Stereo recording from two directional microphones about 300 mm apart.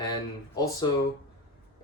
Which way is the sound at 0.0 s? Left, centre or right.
Centre.